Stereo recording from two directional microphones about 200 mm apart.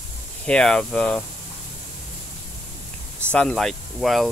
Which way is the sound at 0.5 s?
5° left (ahead or behind).